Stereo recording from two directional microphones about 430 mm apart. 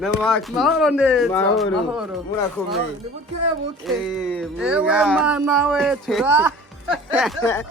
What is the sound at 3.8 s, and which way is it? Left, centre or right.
Speech, centre.